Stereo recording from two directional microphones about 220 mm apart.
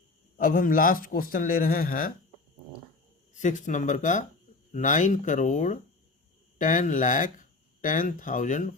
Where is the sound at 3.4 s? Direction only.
35° left (ahead or behind).